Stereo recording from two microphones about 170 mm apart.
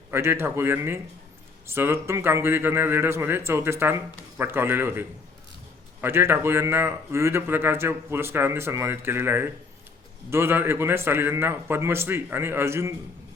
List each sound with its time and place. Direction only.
0.1 s a man's voice: 15° right (ahead or behind)